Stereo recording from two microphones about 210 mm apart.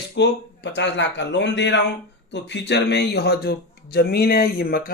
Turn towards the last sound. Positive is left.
turn(degrees=45)  # may be behind; listen again after turning